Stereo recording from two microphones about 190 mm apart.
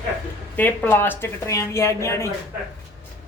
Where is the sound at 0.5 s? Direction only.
10° left (ahead or behind).